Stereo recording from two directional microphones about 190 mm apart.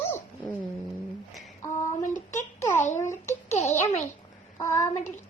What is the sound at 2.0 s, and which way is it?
Speech, 40° left (ahead or behind).